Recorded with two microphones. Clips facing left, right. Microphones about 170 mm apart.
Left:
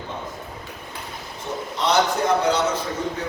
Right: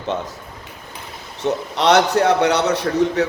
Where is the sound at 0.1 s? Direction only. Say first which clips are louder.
Right 8 dB; 85° right.